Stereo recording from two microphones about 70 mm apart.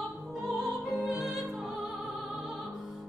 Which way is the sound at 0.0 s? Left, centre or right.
Centre.